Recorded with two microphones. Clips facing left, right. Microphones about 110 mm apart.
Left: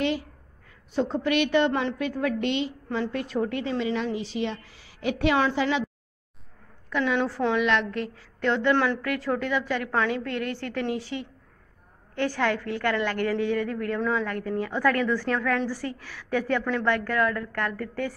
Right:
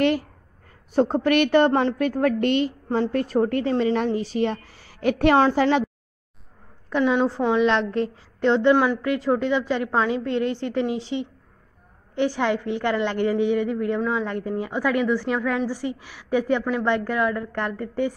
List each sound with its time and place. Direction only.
0.2 s a woman's voice: 45° right (ahead or behind)
6.9 s a woman's voice: 20° right (ahead or behind)
8.7 s a woman's voice: 10° right (ahead or behind)